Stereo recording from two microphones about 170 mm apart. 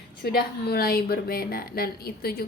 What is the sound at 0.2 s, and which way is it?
A woman's voice, 70° left (ahead or behind).